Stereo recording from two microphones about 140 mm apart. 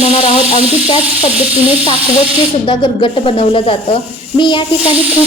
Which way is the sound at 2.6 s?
35° left (ahead or behind).